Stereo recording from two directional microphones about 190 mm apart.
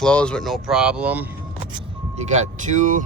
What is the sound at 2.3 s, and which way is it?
Speech, 40° right (ahead or behind).